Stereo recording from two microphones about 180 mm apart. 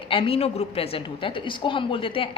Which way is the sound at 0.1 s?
30° left (ahead or behind).